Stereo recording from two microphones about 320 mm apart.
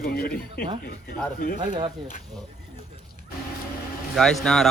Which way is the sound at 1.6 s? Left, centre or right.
Centre.